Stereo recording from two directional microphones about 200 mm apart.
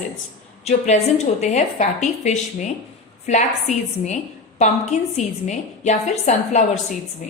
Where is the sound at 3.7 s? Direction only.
35° left (ahead or behind).